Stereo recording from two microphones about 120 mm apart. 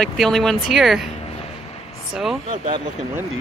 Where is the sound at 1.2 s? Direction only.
60° left (ahead or behind).